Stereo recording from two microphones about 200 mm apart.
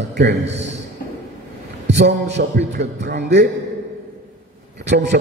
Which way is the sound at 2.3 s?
55° right (ahead or behind).